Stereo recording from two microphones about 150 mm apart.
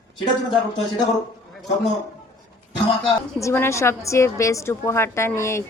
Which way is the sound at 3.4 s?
15° left (ahead or behind).